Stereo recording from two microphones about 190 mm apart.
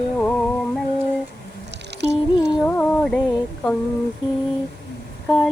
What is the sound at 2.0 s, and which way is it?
Music, 65° right (ahead or behind).